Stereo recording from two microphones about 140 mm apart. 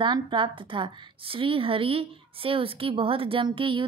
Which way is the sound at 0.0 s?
35° right (ahead or behind).